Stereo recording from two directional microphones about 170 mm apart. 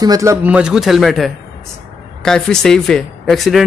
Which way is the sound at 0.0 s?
20° right (ahead or behind).